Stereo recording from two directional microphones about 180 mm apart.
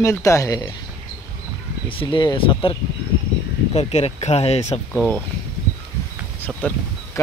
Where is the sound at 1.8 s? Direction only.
30° left (ahead or behind).